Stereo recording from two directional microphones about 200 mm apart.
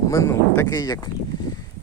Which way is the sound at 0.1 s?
15° left (ahead or behind).